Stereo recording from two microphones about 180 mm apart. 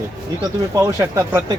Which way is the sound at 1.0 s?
20° right (ahead or behind).